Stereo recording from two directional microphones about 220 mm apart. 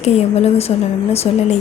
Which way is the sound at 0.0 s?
30° left (ahead or behind).